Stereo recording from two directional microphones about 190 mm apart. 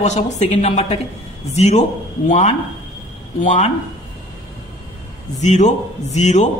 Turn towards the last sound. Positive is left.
turn(degrees=35)  # may be behind; listen again after turning